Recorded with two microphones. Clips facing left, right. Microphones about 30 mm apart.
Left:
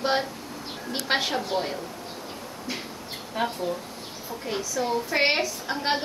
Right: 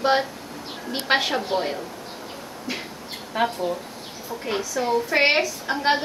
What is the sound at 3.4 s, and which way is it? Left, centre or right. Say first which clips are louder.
A woman's voice: right 4 dB; right.